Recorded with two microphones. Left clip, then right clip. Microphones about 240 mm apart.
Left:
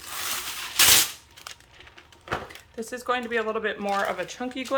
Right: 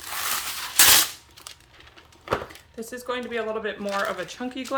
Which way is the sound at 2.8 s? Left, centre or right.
Centre.